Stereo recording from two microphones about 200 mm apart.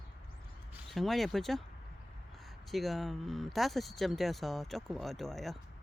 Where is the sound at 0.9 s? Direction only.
Centre (ahead or behind).